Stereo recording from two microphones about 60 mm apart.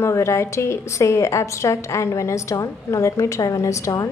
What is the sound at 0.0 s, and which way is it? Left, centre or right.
A woman's voice, left.